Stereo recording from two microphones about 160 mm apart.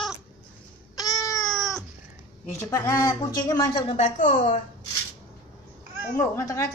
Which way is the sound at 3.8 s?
40° left (ahead or behind).